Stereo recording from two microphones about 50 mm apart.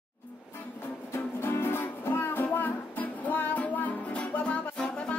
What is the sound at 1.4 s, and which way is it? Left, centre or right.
Music, left.